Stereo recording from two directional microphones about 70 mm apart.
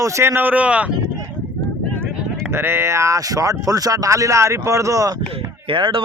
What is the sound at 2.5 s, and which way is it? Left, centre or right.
Speech, right.